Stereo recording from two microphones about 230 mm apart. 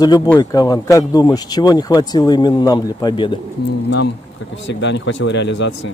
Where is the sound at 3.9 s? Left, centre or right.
Left.